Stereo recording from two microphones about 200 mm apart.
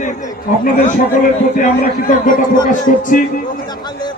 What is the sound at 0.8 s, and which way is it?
A man's voice, 40° left (ahead or behind).